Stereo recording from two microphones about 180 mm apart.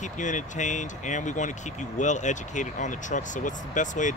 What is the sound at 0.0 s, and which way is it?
Speech, 45° left (ahead or behind).